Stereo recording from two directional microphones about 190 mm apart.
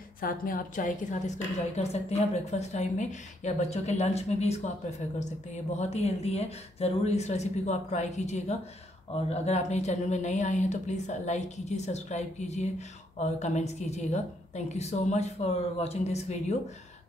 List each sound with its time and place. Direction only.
0.2 s a woman's voice: 50° left (ahead or behind)
5.8 s speech: 35° left (ahead or behind)